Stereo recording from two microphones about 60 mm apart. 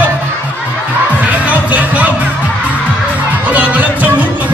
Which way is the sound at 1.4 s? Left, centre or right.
Right.